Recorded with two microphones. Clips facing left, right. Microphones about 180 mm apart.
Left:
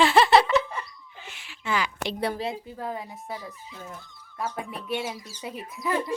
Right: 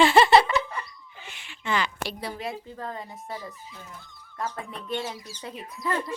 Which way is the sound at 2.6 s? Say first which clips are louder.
Left 2 dB; 10° left (ahead or behind).